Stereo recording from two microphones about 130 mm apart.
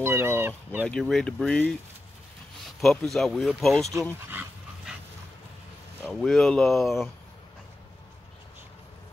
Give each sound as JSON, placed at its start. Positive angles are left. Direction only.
{"t": 0.0, "sound": "fowl", "side_deg": -20}
{"t": 0.8, "sound": "speech", "side_deg": 5}
{"t": 2.8, "sound": "speech", "side_deg": 0}
{"t": 4.3, "sound": "dog", "side_deg": -15}
{"t": 6.0, "sound": "speech", "side_deg": 5}